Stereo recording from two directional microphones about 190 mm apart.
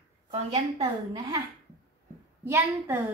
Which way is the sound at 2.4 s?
10° right (ahead or behind).